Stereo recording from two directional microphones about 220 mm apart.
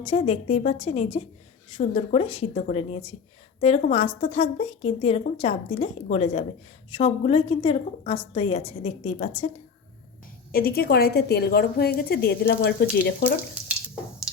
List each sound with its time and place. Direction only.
0.0 s speech: 30° left (ahead or behind)
10.5 s a woman's voice: 45° left (ahead or behind)